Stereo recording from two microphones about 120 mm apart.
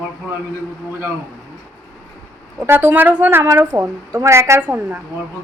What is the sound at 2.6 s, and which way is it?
A woman's voice, 15° right (ahead or behind).